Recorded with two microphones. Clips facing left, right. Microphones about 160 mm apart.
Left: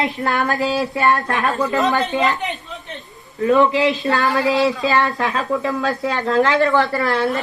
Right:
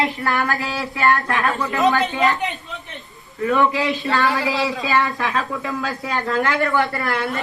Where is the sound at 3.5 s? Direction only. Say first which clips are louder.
Left 4 dB; 20° left (ahead or behind).